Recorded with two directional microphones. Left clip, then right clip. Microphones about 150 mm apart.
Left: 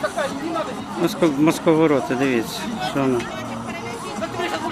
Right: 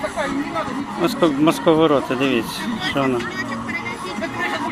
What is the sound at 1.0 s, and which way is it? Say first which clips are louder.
Speech: right 1 dB; 10° left (ahead or behind).